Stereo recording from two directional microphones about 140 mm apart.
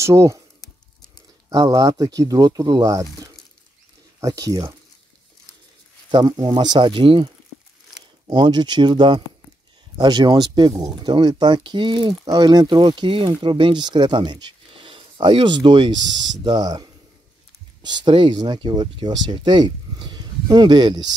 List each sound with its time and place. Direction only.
0.0 s speech: 20° right (ahead or behind)
1.5 s speech: 25° right (ahead or behind)
6.1 s speech: 30° right (ahead or behind)